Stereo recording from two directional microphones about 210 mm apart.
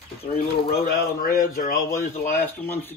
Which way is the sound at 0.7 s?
45° left (ahead or behind).